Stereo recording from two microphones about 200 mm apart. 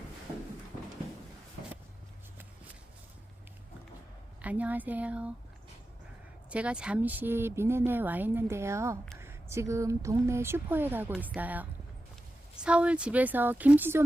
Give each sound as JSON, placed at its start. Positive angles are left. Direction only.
{"t": 4.4, "sound": "speech", "side_deg": -5}
{"t": 6.5, "sound": "speech", "side_deg": -5}